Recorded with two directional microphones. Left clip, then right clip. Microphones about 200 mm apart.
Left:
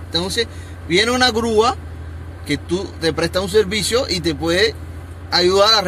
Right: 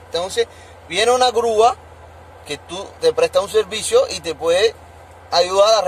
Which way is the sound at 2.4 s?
10° right (ahead or behind).